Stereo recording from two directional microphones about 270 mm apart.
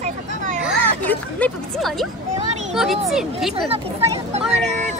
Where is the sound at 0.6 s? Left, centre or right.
Centre.